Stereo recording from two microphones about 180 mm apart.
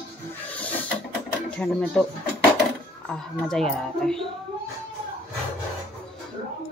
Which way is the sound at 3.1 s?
5° left (ahead or behind).